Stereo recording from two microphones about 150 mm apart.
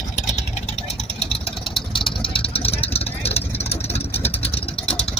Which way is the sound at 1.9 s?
35° left (ahead or behind).